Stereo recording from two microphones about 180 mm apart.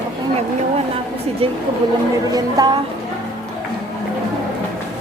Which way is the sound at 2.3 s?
20° right (ahead or behind).